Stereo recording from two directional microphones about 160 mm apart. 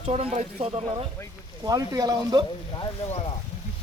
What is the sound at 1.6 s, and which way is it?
Speech, 25° right (ahead or behind).